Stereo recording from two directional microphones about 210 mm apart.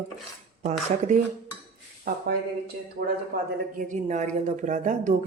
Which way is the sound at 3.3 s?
45° right (ahead or behind).